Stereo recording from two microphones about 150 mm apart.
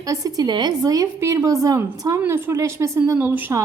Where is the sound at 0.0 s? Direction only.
25° right (ahead or behind).